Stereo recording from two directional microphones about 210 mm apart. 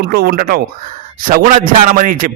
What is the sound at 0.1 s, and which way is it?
A man's voice, 45° right (ahead or behind).